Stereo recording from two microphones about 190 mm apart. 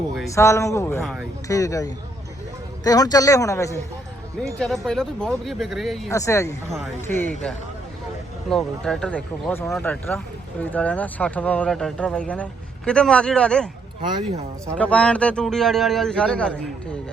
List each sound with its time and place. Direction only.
0.3 s a man's voice: 15° left (ahead or behind)
4.5 s speech: centre (ahead or behind)
6.1 s a man's voice: 15° left (ahead or behind)
14.8 s speech: 5° left (ahead or behind)